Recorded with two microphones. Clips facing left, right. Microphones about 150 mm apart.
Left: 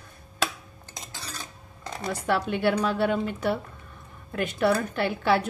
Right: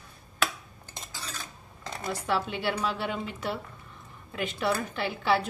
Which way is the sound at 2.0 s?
55° left (ahead or behind).